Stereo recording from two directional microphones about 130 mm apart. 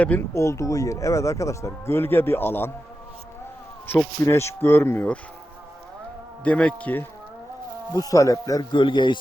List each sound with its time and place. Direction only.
0.0 s speech: 15° left (ahead or behind)
3.8 s speech: 20° left (ahead or behind)
6.4 s speech: 10° left (ahead or behind)
7.9 s speech: 25° left (ahead or behind)
8.8 s speech: 35° left (ahead or behind)